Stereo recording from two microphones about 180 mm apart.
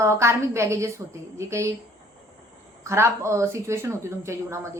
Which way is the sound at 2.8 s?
15° right (ahead or behind).